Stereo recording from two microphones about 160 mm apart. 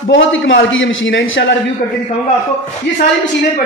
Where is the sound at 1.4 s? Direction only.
90° left.